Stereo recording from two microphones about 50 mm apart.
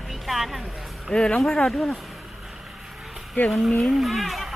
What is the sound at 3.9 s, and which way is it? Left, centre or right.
Speech, centre.